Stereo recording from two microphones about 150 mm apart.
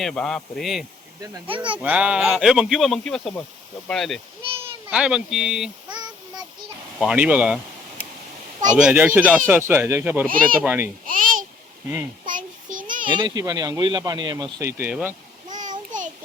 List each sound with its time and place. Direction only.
0.0 s speech: 5° left (ahead or behind)
1.5 s speech: 35° right (ahead or behind)
1.8 s speech: 10° right (ahead or behind)
5.9 s child singing: 30° right (ahead or behind)
7.0 s speech: 5° right (ahead or behind)
8.8 s speech: 10° right (ahead or behind)
10.2 s speech: 70° right (ahead or behind)
10.6 s speech: 10° right (ahead or behind)
11.0 s babbling: 65° right (ahead or behind)
12.2 s child singing: 60° right (ahead or behind)
13.1 s speech: 30° right (ahead or behind); by 15.1 s 15° right (ahead or behind)